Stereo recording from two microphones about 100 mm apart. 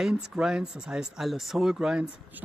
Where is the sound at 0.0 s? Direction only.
5° right (ahead or behind).